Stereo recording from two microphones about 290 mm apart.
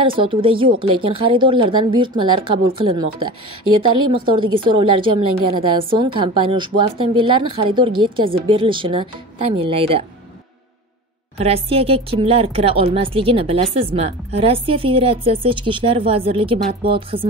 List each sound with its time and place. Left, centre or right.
0.2 s a woman's voice: centre
3.2 s speech: right
4.3 s a woman's voice: centre
11.3 s speech: centre